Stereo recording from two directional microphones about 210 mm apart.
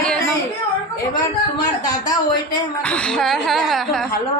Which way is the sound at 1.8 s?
20° left (ahead or behind).